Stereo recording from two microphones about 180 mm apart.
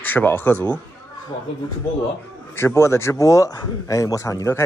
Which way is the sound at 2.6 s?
15° left (ahead or behind).